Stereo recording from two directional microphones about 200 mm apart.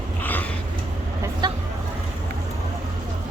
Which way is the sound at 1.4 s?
20° right (ahead or behind).